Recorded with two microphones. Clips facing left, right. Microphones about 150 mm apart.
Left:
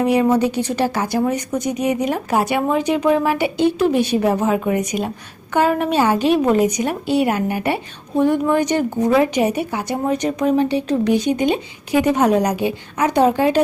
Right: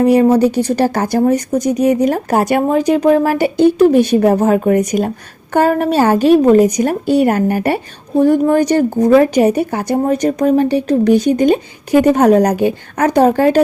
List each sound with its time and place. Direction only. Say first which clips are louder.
0.0 s a woman's voice: right 6 dB; 40° right (ahead or behind)